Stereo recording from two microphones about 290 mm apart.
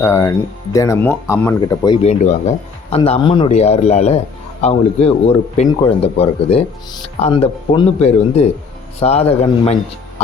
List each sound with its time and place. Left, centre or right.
0.0 s speech: centre